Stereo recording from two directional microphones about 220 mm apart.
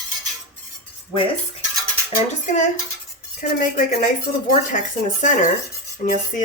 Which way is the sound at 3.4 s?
40° left (ahead or behind).